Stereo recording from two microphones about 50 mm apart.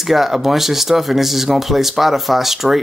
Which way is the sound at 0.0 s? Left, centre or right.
Centre.